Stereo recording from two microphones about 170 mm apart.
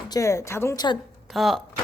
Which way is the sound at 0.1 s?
20° left (ahead or behind).